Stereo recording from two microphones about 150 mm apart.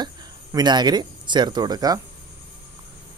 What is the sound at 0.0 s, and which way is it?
Speech, 25° right (ahead or behind).